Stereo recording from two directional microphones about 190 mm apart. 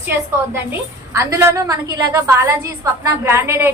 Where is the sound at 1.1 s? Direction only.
15° right (ahead or behind).